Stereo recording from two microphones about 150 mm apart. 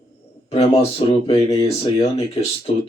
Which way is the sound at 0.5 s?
40° left (ahead or behind).